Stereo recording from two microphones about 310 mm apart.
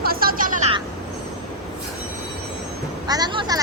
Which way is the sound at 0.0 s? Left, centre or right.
Right.